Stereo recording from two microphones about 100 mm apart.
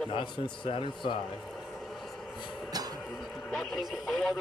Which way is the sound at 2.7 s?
40° right (ahead or behind).